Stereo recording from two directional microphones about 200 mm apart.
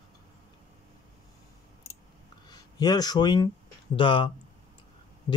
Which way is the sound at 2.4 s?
20° left (ahead or behind).